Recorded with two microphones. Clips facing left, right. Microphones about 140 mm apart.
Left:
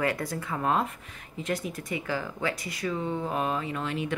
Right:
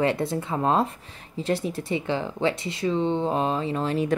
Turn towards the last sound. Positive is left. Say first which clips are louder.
# right 7 dB
turn(degrees=-35)  # may be behind; listen again after turning